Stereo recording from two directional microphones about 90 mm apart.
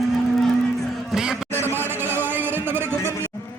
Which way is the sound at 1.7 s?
25° right (ahead or behind).